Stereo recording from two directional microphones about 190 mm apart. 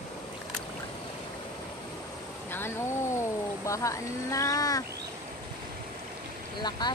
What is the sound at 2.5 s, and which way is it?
Speech, 15° left (ahead or behind).